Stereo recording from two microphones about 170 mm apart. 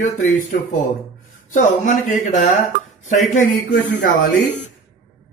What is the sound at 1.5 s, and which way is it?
A man's voice, 45° left (ahead or behind).